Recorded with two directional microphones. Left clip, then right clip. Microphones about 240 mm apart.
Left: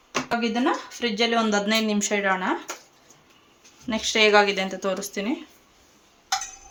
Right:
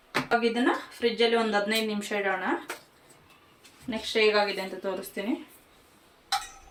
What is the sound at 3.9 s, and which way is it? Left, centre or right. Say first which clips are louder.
Speech: left 5 dB; left.